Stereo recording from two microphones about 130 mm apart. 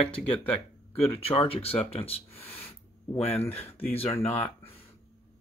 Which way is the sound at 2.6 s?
50° left (ahead or behind).